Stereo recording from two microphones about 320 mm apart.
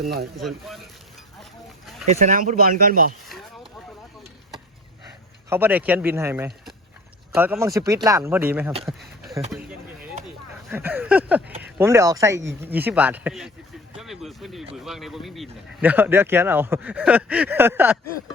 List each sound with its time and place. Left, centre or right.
0.3 s a man's voice: centre
2.0 s speech: right
3.2 s a sound: centre
5.5 s a man's voice: centre
8.8 s a sound: centre
9.5 s a man's voice: centre